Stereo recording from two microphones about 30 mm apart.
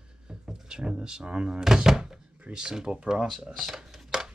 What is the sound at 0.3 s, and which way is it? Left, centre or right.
Speech, right.